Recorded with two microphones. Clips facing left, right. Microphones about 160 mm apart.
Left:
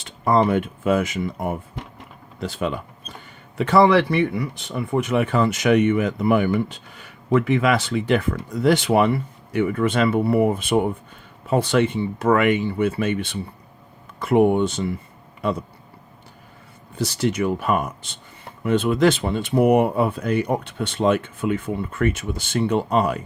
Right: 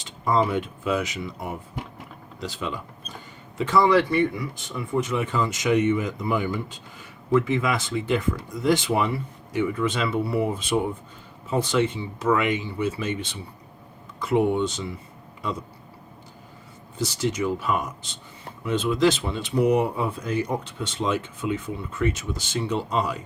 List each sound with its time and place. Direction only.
0.0 s speech: 60° left (ahead or behind)
17.0 s speech: 60° left (ahead or behind)